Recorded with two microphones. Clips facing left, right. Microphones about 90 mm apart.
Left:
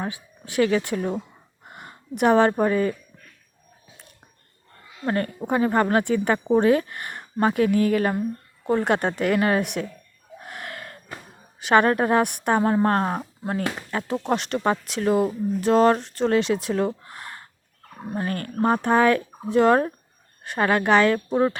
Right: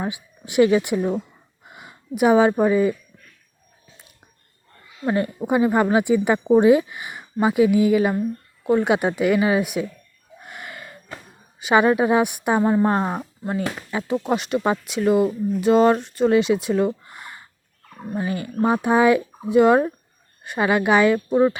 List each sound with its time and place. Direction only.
0.0 s speech: 15° right (ahead or behind)
1.6 s speech: centre (ahead or behind)
5.0 s speech: 10° right (ahead or behind)
10.4 s gasp: centre (ahead or behind)
11.6 s speech: 5° right (ahead or behind)